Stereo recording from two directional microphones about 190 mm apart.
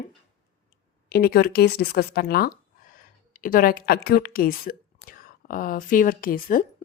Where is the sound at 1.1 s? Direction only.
55° left (ahead or behind).